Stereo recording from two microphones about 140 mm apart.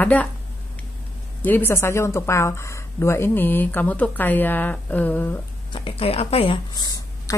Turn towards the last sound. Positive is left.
turn(degrees=25)  # may be behind; listen again after turning